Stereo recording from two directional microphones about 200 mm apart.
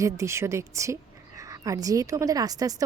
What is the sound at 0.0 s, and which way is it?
A woman's voice, 15° right (ahead or behind).